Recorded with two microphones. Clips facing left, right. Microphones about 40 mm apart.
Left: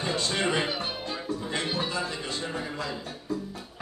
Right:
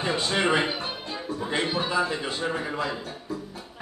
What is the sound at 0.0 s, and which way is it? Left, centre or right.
A man's voice, right.